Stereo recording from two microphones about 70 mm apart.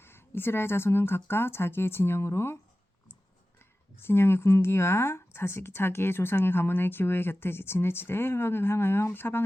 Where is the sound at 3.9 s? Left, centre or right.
Left.